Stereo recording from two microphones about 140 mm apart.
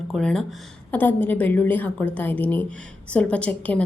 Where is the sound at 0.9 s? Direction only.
15° left (ahead or behind).